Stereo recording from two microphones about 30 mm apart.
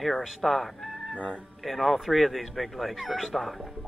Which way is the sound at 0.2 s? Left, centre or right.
Centre.